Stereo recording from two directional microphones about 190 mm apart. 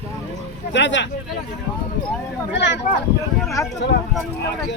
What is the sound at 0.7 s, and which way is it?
Speech, 70° left (ahead or behind).